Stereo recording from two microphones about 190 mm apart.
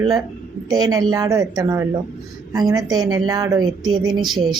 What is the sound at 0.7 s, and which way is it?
A woman's voice, 20° right (ahead or behind).